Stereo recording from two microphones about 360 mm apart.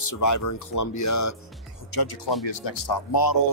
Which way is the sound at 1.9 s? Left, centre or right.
Left.